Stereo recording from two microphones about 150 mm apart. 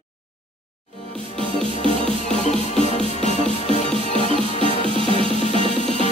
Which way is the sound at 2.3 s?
50° left (ahead or behind).